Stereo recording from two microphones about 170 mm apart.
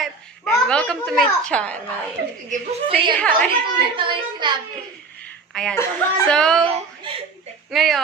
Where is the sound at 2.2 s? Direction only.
75° right (ahead or behind).